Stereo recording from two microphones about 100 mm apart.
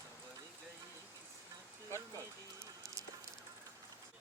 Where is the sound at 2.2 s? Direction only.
30° right (ahead or behind).